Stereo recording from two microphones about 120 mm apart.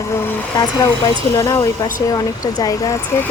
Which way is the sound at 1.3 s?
25° left (ahead or behind).